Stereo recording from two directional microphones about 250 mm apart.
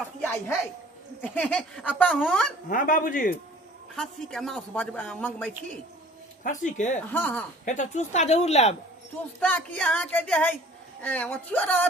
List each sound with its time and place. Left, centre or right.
1.2 s a woman's voice: centre
2.6 s speech: left
3.9 s a woman's voice: centre
6.4 s speech: left
7.1 s a woman's voice: centre
7.6 s speech: left
9.4 s a woman's voice: centre